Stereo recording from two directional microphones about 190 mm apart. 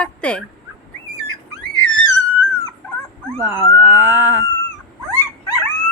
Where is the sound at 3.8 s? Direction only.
10° right (ahead or behind).